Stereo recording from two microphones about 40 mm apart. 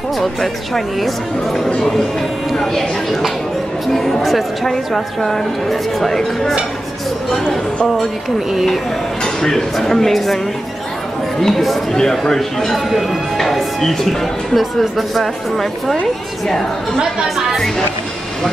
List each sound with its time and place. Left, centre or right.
0.2 s a woman's voice: centre
9.2 s a woman's voice: centre
17.0 s speech: centre